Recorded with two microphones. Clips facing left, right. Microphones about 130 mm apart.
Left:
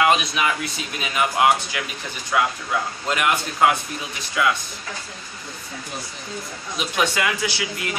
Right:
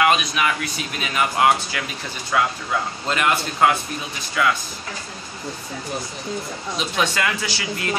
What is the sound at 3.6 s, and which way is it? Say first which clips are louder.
Speech: even; 10° left (ahead or behind).